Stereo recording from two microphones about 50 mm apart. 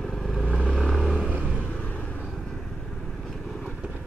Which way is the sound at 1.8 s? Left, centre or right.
Left.